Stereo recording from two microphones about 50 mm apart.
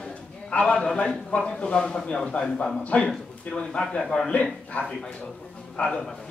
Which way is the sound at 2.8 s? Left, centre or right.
Left.